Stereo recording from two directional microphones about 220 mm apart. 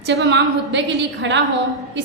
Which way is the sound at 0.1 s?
55° right (ahead or behind).